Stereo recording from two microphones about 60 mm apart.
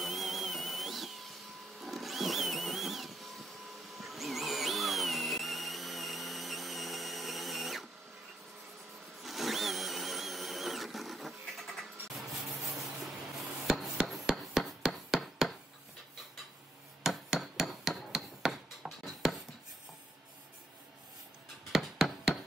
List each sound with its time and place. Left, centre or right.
0.0 s a sound: centre
1.8 s music: centre
9.2 s a sound: centre
12.2 s rub: centre
15.1 s chopping: centre
17.0 s hammer: centre
21.7 s music: centre